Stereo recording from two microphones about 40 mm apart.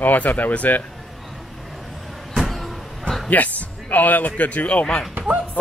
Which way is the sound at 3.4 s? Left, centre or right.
Left.